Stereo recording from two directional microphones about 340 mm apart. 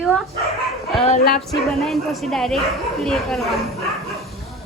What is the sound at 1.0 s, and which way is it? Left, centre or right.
Music, left.